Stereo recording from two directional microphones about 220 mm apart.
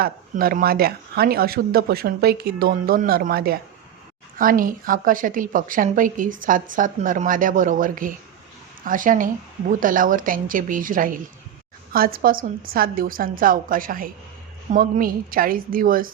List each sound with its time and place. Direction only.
0.0 s a woman's voice: 40° right (ahead or behind)